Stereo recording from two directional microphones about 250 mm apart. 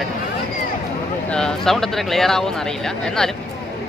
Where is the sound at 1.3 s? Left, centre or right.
Centre.